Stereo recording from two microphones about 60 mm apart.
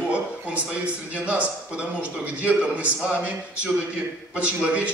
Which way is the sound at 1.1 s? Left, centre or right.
Right.